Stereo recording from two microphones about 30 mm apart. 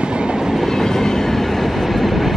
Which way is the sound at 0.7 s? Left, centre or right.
Centre.